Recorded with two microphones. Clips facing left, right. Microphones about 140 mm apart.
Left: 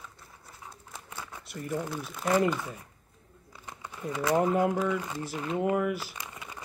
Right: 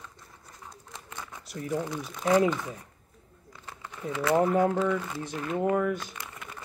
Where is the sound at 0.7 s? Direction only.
10° left (ahead or behind).